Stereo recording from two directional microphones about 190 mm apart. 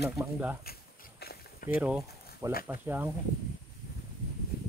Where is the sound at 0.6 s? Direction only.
55° left (ahead or behind).